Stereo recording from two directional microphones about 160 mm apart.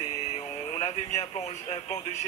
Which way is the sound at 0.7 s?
40° left (ahead or behind).